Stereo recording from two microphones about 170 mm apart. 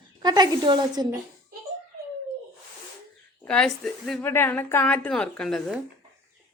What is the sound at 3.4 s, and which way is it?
Speech, 5° left (ahead or behind).